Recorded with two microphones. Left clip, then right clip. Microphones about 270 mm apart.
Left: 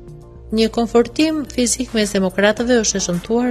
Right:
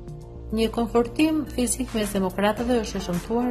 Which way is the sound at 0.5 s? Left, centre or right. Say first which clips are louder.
Left 7 dB; left.